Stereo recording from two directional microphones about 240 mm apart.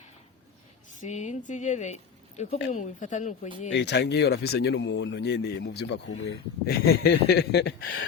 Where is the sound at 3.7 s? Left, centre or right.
Left.